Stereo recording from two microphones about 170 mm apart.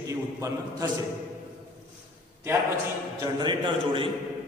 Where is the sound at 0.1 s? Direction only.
20° right (ahead or behind).